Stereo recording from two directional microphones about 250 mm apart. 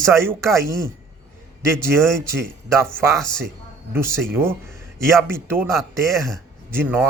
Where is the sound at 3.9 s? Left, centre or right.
Centre.